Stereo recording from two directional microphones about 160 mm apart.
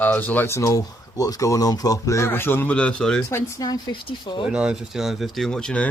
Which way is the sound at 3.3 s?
20° left (ahead or behind).